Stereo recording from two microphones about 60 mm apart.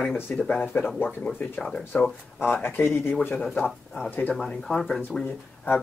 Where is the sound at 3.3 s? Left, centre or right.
Centre.